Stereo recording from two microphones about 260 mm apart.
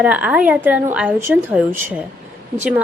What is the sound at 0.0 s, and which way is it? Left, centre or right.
A woman's voice, centre.